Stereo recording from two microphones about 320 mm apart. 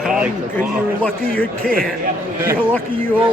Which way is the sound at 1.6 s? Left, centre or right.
Right.